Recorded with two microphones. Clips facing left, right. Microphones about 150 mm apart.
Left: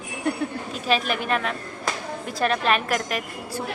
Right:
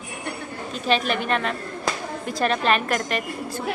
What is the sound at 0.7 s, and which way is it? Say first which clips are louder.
A woman's voice: right 3 dB; 5° left (ahead or behind).